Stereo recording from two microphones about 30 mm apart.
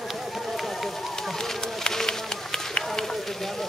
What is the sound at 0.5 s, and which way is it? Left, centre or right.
Run, centre.